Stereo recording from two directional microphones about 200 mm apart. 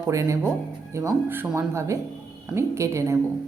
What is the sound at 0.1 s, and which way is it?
Speech, 15° right (ahead or behind).